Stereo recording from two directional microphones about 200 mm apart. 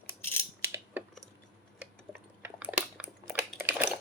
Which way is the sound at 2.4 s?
5° right (ahead or behind).